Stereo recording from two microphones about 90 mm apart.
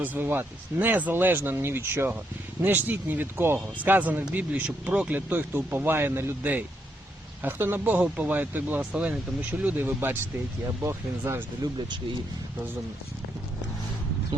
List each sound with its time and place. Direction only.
0.0 s speech: 20° right (ahead or behind)
11.6 s speech: 50° right (ahead or behind)